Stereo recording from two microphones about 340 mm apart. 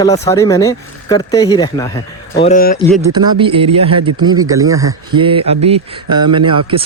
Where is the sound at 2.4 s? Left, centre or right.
Left.